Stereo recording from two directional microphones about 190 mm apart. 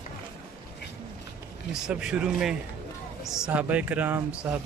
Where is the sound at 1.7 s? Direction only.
5° right (ahead or behind).